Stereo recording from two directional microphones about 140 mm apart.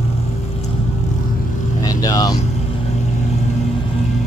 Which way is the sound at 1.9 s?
25° left (ahead or behind).